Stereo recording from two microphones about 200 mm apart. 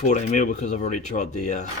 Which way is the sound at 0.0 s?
35° left (ahead or behind).